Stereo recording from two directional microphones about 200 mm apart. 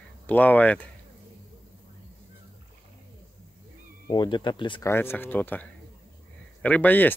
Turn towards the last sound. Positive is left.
turn(degrees=10)  # may be behind; listen again after turning